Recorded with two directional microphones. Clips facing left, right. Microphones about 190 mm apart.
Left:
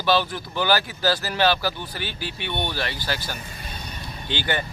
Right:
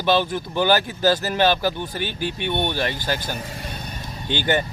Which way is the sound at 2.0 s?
50° right (ahead or behind).